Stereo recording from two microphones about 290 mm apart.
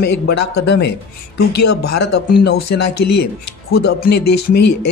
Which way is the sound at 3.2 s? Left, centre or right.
Left.